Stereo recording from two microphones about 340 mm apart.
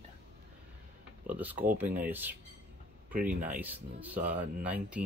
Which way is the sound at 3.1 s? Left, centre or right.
Right.